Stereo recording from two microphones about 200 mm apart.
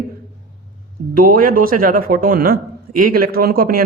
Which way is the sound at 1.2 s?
45° right (ahead or behind).